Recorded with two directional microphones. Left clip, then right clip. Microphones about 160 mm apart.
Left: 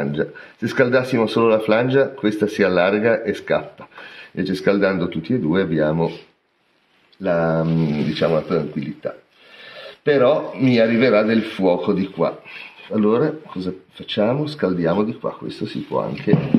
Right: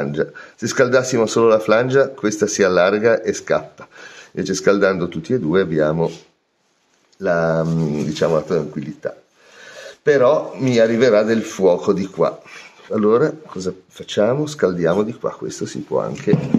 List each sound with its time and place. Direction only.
0.0 s speech: 10° right (ahead or behind)
7.2 s speech: 20° right (ahead or behind)
12.8 s speech: 25° right (ahead or behind)